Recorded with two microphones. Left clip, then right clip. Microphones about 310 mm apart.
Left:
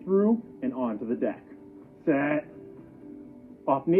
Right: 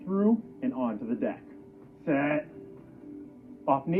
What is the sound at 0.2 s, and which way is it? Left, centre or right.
A man's voice, right.